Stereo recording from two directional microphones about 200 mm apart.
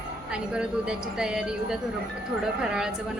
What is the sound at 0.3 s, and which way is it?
A woman's voice, 5° right (ahead or behind).